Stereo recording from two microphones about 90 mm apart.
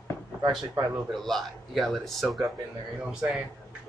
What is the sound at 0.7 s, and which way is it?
Speech, 30° right (ahead or behind).